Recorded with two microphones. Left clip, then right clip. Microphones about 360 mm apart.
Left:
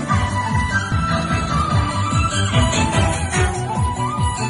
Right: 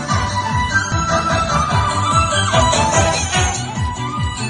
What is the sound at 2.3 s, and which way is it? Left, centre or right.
Music, centre.